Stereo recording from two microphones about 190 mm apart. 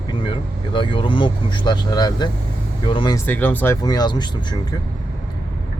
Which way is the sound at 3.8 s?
20° left (ahead or behind).